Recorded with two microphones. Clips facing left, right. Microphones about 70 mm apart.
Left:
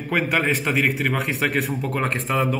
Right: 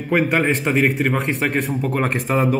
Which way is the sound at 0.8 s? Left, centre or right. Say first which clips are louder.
Right 3 dB; centre.